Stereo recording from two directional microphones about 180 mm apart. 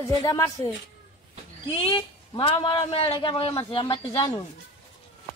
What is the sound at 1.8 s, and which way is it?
A man's voice, 25° left (ahead or behind).